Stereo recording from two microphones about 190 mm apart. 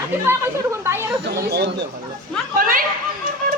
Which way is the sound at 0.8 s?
15° right (ahead or behind).